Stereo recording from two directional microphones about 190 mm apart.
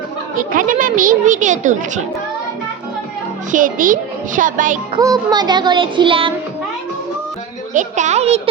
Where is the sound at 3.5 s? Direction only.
45° right (ahead or behind).